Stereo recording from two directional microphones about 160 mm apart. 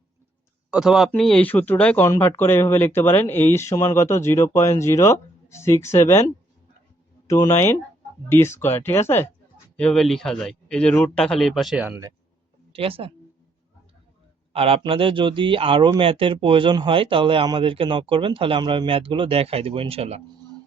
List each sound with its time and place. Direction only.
0.7 s speech: 5° right (ahead or behind)
12.7 s speech: 35° right (ahead or behind)
14.5 s speech: 35° right (ahead or behind)